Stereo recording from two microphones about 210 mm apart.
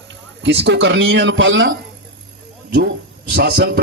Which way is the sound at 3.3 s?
50° right (ahead or behind).